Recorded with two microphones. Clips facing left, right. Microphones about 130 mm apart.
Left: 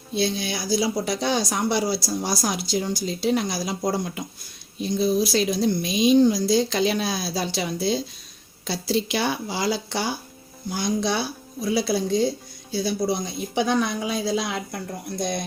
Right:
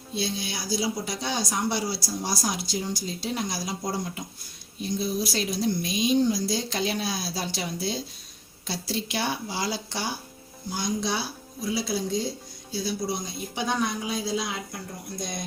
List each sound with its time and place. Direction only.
0.1 s speech: 70° left (ahead or behind); by 10.0 s 85° left
10.8 s speech: 65° left (ahead or behind)
13.6 s speech: 90° left; by 14.8 s 70° left (ahead or behind)